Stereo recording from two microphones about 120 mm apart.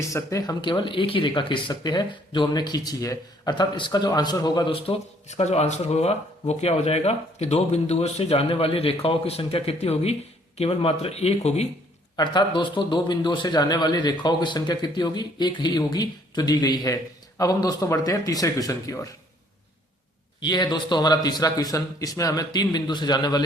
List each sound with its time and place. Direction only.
0.1 s speech: 25° left (ahead or behind)
0.6 s a man's voice: 40° left (ahead or behind)
5.3 s speech: 65° left (ahead or behind)
12.1 s a man's voice: 40° left (ahead or behind)
20.4 s a man's voice: 35° left (ahead or behind)